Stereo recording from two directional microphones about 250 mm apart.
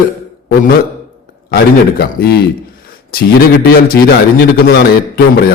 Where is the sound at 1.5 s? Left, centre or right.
Left.